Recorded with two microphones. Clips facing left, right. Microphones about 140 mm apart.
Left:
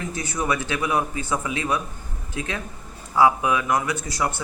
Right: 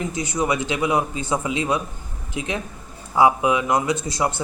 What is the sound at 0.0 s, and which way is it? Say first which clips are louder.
Speech: right 4 dB; 15° right (ahead or behind).